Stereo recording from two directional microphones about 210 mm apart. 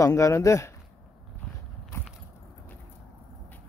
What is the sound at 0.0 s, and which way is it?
Speech, 15° left (ahead or behind).